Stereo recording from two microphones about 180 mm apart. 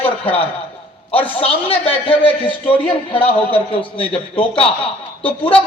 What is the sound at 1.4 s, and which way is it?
A woman's voice, 30° left (ahead or behind).